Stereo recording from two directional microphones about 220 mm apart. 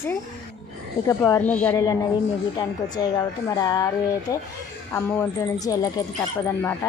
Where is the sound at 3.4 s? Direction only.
15° left (ahead or behind).